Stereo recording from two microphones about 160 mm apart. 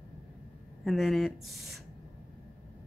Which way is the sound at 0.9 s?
Centre (ahead or behind).